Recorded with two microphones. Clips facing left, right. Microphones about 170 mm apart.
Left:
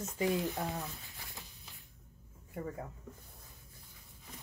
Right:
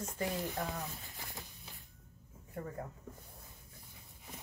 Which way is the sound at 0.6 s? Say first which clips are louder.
Left 1 dB; 20° left (ahead or behind).